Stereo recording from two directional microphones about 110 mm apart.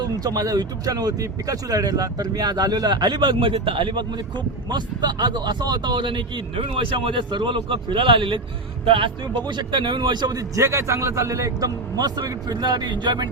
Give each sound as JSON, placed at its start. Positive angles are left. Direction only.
{"t": 0.0, "sound": "speech", "side_deg": -35}